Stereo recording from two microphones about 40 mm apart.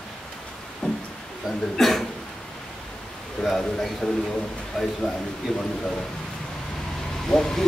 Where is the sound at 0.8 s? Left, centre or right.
Left.